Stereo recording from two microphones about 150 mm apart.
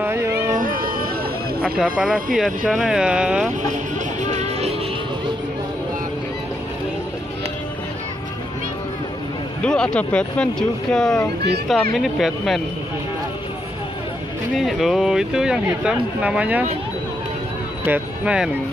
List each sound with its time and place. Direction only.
0.0 s a sound: 15° right (ahead or behind)
0.5 s a sound: 65° right (ahead or behind)
1.6 s speech: 5° right (ahead or behind)
4.2 s music: 50° right (ahead or behind)
9.6 s speech: 5° left (ahead or behind)
14.6 s speech: centre (ahead or behind)
17.8 s speech: 10° right (ahead or behind)